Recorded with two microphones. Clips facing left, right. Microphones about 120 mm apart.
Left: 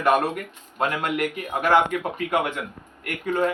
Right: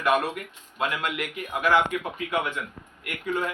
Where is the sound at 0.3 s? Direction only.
45° left (ahead or behind).